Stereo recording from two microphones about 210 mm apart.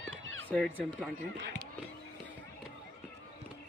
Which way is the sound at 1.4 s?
55° right (ahead or behind).